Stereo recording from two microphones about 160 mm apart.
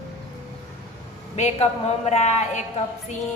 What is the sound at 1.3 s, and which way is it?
A man's voice, 45° left (ahead or behind).